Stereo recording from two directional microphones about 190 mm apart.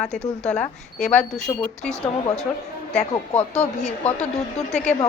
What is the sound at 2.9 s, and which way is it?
Speech, 35° left (ahead or behind).